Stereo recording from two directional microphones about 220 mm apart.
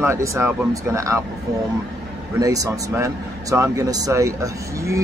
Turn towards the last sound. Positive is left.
turn(degrees=-15)  # may be behind; listen again after turning